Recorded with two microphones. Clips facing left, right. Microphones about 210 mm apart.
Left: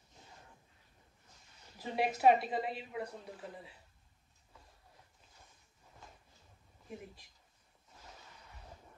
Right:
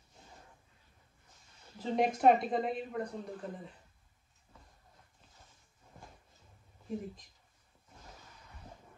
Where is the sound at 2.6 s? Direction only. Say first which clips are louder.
Right 5 dB; 50° right (ahead or behind).